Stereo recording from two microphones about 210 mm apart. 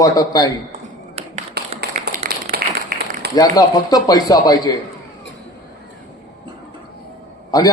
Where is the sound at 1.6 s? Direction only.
50° right (ahead or behind).